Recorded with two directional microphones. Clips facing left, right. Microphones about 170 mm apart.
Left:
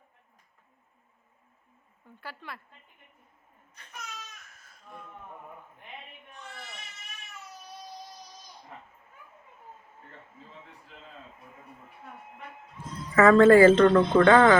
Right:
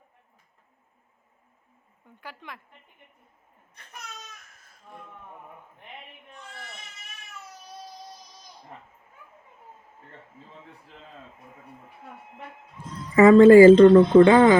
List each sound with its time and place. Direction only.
2.2 s speech: 15° right (ahead or behind)
13.1 s speech: 15° right (ahead or behind)